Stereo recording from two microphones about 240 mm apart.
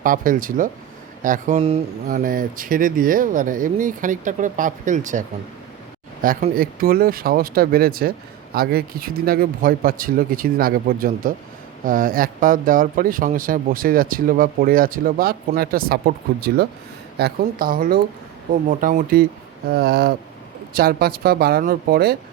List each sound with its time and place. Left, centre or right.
0.0 s speech: right
2.0 s speech: right
6.2 s speech: right